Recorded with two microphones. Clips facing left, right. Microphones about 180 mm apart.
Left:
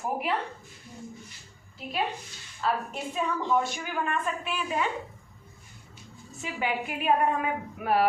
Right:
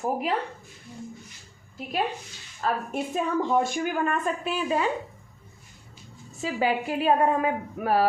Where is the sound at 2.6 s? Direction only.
45° right (ahead or behind).